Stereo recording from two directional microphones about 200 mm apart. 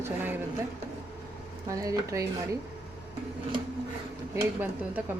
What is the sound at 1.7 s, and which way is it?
Speech, 15° right (ahead or behind).